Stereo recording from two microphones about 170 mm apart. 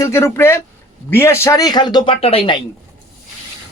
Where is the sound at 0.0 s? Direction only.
15° left (ahead or behind); by 2.6 s 35° left (ahead or behind).